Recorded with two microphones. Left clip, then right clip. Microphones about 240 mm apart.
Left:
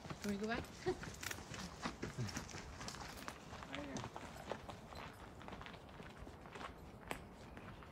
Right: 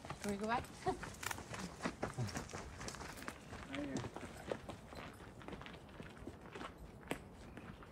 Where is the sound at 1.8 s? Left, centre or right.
Centre.